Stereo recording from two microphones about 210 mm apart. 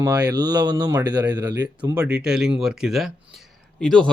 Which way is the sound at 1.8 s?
5° right (ahead or behind).